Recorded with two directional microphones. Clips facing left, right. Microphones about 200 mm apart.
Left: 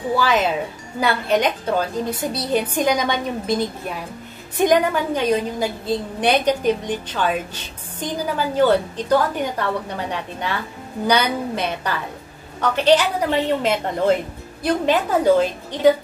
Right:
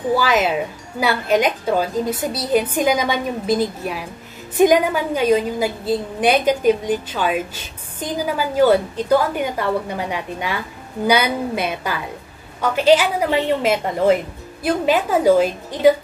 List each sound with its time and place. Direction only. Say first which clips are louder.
0.1 s a woman's voice: right 1 dB; 5° right (ahead or behind)